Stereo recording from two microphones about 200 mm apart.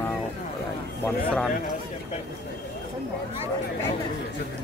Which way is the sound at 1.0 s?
5° left (ahead or behind).